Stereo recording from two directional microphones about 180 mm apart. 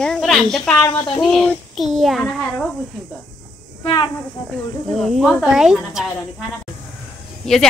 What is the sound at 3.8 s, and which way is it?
Speech, 25° left (ahead or behind).